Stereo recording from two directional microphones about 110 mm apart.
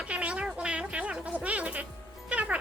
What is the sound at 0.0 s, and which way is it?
Music, 10° right (ahead or behind).